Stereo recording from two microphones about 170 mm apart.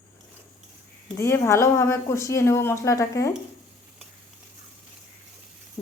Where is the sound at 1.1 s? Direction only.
15° left (ahead or behind).